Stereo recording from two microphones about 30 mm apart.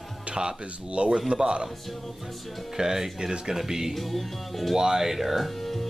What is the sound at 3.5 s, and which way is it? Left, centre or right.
Music, centre.